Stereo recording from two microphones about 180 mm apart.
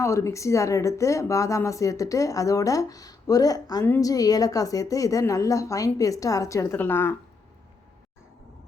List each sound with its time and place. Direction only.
0.0 s speech: 15° left (ahead or behind)